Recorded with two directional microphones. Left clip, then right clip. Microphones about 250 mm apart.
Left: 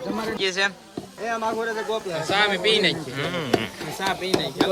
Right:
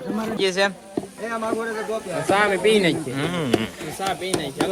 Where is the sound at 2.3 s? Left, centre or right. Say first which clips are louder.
Right 2 dB; centre.